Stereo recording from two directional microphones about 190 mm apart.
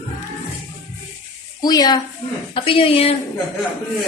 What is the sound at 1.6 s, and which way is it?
A woman's voice, 20° left (ahead or behind).